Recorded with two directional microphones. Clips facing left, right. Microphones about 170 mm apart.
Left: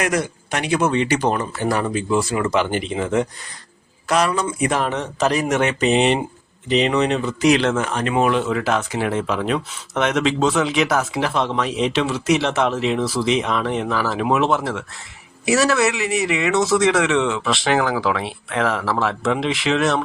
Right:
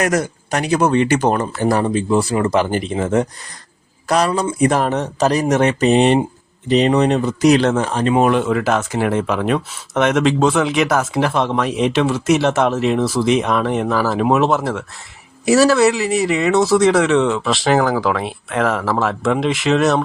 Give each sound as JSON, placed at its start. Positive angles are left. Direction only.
{"t": 0.0, "sound": "speech", "side_deg": -45}
{"t": 1.8, "sound": "speech", "side_deg": -30}
{"t": 8.3, "sound": "speech", "side_deg": -50}